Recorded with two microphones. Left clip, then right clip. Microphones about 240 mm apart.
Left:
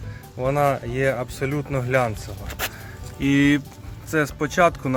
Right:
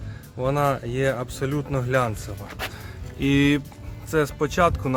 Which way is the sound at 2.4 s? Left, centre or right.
Left.